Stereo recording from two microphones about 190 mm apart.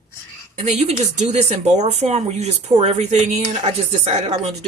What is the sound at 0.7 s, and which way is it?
Speech, 35° right (ahead or behind).